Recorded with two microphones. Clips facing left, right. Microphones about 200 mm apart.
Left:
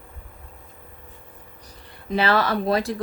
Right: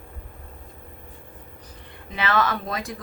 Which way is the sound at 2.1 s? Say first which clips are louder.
Left 3 dB; 35° left (ahead or behind).